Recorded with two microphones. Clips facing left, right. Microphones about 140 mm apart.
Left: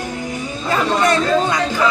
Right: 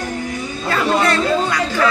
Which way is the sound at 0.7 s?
20° left (ahead or behind).